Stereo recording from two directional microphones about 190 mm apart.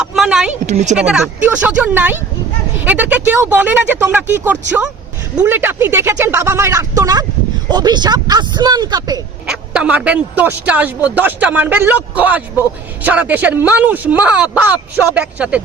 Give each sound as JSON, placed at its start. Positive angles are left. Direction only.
{"t": 0.0, "sound": "a sound", "side_deg": 0}
{"t": 0.7, "sound": "speech", "side_deg": -35}
{"t": 0.9, "sound": "speech", "side_deg": -5}
{"t": 9.5, "sound": "speech", "side_deg": -5}